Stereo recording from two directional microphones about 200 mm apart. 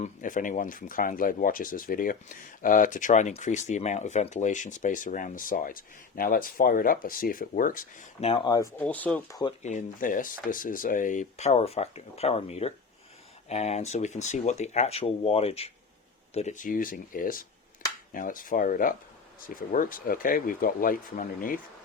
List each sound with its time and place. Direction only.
0.0 s speech: 40° left (ahead or behind); by 8.7 s 20° left (ahead or behind)
8.8 s speech: 5° left (ahead or behind)
9.6 s speech: 40° left (ahead or behind)